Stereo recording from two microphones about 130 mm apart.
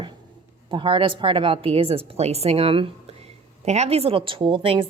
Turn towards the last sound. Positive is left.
turn(degrees=-45)  # may be behind; listen again after turning